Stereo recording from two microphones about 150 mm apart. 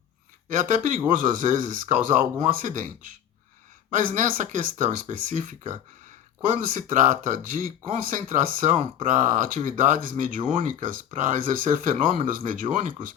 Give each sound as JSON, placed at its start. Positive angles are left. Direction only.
{"t": 0.4, "sound": "speech", "side_deg": -60}
{"t": 3.9, "sound": "speech", "side_deg": -60}
{"t": 12.7, "sound": "speech", "side_deg": -30}